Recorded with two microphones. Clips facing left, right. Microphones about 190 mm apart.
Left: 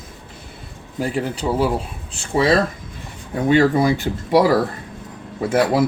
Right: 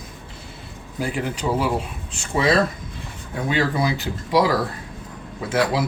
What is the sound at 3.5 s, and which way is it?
Speech, 50° left (ahead or behind).